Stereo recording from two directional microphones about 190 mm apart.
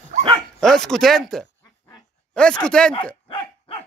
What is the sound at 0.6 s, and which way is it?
Speech, centre (ahead or behind).